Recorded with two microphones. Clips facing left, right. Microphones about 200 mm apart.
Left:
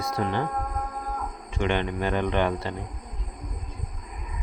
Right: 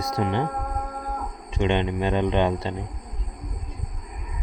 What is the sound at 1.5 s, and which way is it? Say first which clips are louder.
Speech: right 3 dB; 20° right (ahead or behind).